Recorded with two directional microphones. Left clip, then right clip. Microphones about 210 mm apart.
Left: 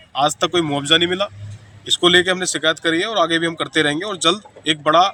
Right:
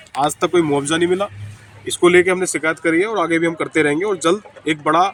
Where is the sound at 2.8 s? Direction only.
25° left (ahead or behind).